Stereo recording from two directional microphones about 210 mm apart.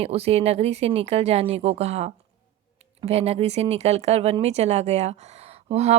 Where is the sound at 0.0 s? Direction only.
30° right (ahead or behind).